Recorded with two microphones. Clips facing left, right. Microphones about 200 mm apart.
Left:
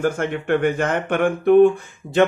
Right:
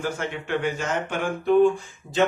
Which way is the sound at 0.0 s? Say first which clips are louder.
Left 7 dB; 50° left (ahead or behind).